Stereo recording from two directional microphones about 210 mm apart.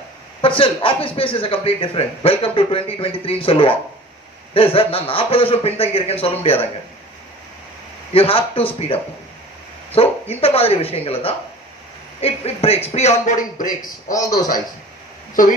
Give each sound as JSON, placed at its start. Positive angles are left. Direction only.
{"t": 0.4, "sound": "speech", "side_deg": 25}
{"t": 8.1, "sound": "a man's voice", "side_deg": 25}